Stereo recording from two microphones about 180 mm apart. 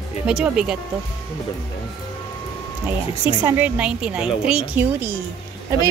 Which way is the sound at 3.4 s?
10° right (ahead or behind).